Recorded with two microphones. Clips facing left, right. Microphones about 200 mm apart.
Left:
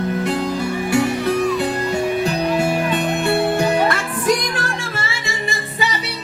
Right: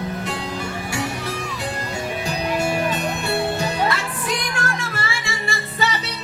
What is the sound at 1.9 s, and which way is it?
Music, 60° left (ahead or behind).